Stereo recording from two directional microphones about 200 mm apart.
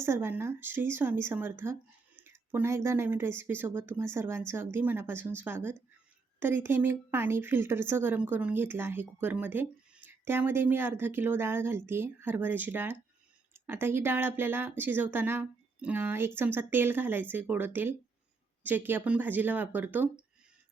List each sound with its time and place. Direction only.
0.0 s speech: 10° right (ahead or behind)